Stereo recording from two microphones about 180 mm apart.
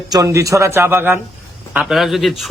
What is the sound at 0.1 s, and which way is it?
A man's voice, 20° right (ahead or behind).